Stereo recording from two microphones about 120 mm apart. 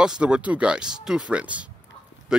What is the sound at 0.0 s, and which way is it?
Speech, 5° right (ahead or behind).